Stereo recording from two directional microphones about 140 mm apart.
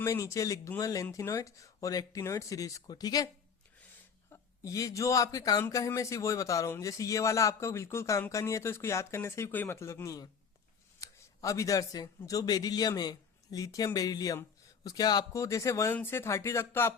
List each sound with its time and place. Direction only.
0.0 s speech: 20° left (ahead or behind)
4.3 s speech: 25° left (ahead or behind)